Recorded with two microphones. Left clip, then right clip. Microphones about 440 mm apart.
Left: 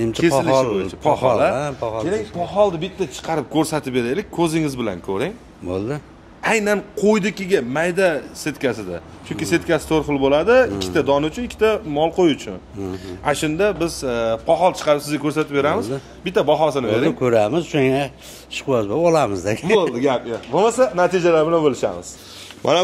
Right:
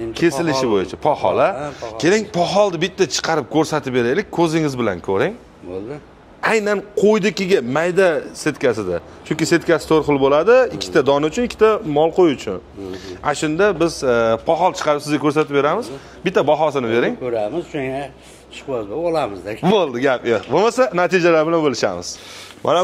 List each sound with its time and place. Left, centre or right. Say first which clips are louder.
0.1 s a man's voice: left 1 dB; right
6.4 s a man's voice: right 1 dB; centre
17.2 s speech: left 5 dB; left
19.6 s a man's voice: right 2 dB; right
22.6 s speech: even; centre